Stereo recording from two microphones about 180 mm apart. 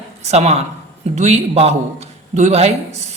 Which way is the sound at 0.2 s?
35° right (ahead or behind).